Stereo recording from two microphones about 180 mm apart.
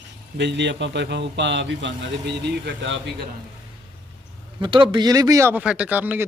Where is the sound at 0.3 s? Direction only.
75° right (ahead or behind).